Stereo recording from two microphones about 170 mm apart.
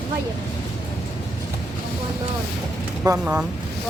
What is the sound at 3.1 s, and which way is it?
Speech, 10° right (ahead or behind).